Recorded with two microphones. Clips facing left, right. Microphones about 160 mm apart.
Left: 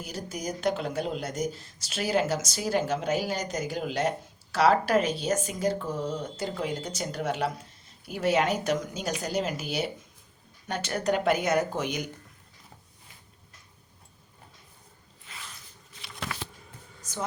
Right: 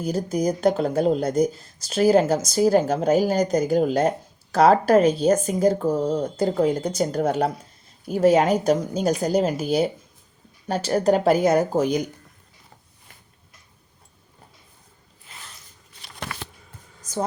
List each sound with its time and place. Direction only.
0.1 s speech: 40° right (ahead or behind)
16.0 s shuffling cards: 50° right (ahead or behind)